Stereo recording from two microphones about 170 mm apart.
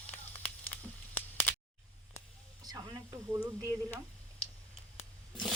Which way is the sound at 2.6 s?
20° right (ahead or behind).